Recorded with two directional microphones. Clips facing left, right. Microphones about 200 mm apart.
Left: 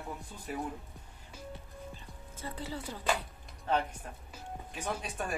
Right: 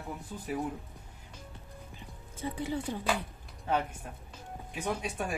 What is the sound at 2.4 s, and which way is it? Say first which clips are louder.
Speech: right 6 dB; 15° right (ahead or behind).